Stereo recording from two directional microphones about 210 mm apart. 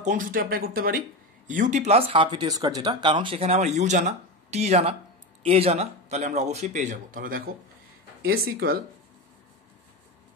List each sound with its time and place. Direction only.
0.0 s speech: 40° right (ahead or behind)